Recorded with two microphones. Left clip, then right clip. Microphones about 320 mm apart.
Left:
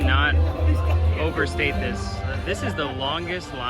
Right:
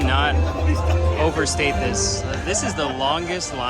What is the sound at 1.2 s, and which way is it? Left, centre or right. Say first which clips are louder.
Speech: right 2 dB; centre.